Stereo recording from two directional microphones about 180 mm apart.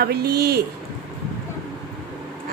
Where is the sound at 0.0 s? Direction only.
60° right (ahead or behind).